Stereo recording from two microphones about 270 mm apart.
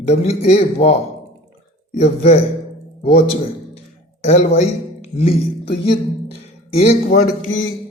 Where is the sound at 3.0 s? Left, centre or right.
Left.